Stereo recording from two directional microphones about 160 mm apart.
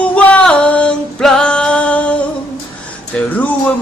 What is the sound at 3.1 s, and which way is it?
Music, 10° left (ahead or behind).